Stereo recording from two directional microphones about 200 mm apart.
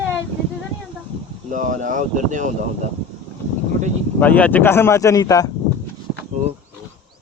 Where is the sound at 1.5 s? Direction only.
40° right (ahead or behind).